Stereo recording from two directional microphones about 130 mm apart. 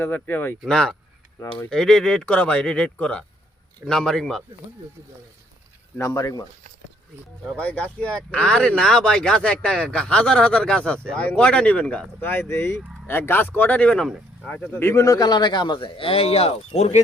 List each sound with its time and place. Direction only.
0.0 s speech: 15° left (ahead or behind)
0.6 s speech: 5° left (ahead or behind)
6.0 s speech: 25° left (ahead or behind)
7.5 s a man's voice: 10° left (ahead or behind); by 17.0 s 60° left (ahead or behind)